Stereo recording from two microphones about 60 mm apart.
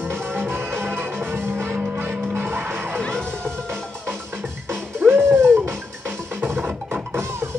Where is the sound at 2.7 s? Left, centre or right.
Right.